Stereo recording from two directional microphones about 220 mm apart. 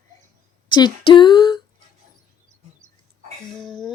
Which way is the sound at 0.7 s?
20° left (ahead or behind).